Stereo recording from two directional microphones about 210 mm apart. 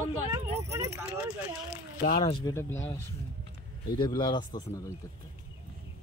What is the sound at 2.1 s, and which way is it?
Speech, 20° left (ahead or behind).